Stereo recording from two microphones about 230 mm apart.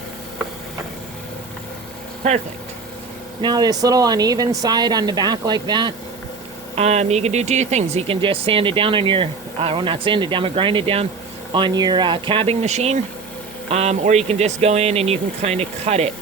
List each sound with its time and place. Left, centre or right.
3.4 s speech: centre